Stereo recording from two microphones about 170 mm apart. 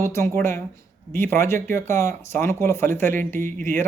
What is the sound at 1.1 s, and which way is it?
Speech, 10° left (ahead or behind).